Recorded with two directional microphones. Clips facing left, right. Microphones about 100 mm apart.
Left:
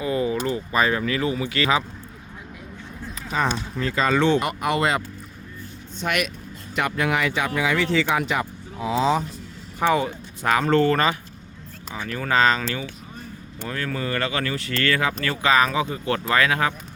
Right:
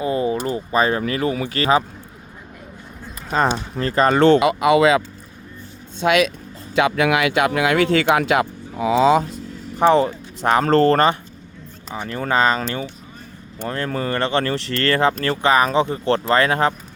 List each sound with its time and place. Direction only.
0.0 s a sound: 30° right (ahead or behind)
0.4 s speech: 30° right (ahead or behind)
3.2 s speech: 60° right (ahead or behind)
3.8 s speech: 50° right (ahead or behind); by 4.7 s 90° right
6.0 s speech: 80° right
6.7 s speech: 90° right; by 9.2 s 70° right (ahead or behind)
9.7 s speech: 35° right (ahead or behind)